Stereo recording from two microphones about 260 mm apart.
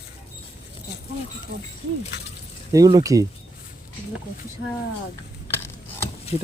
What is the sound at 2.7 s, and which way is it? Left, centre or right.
Speech, centre.